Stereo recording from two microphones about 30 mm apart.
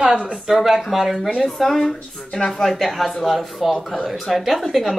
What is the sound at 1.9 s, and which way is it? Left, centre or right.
Speech, left.